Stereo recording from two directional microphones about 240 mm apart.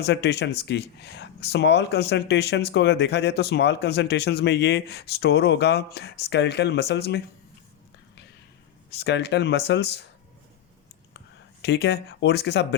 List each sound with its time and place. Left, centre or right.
0.0 s speech: left
9.0 s speech: left
11.6 s speech: left